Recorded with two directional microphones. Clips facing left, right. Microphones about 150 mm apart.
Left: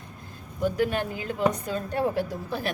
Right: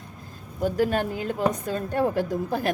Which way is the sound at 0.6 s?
40° right (ahead or behind).